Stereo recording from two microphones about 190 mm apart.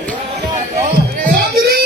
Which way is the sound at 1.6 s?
60° right (ahead or behind).